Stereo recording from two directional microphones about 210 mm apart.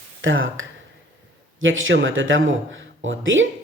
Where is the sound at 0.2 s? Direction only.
70° right (ahead or behind).